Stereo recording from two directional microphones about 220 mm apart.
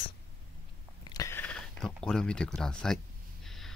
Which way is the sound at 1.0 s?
15° left (ahead or behind).